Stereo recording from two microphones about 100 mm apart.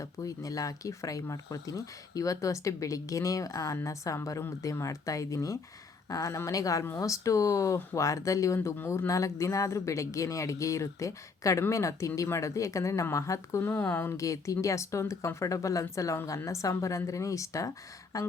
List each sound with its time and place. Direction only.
0.0 s speech: 35° left (ahead or behind)
14.2 s speech: 30° left (ahead or behind)